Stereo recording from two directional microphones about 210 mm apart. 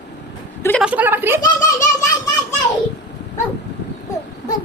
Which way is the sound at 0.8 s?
5° right (ahead or behind).